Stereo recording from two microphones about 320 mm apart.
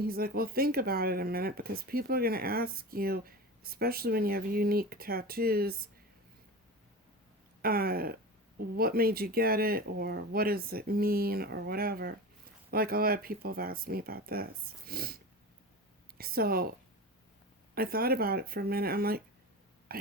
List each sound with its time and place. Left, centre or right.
0.0 s speech: right
7.6 s speech: right
17.7 s speech: right
19.9 s a sound: right